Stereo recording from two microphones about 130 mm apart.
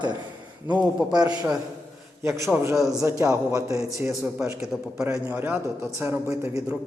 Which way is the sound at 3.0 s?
25° right (ahead or behind).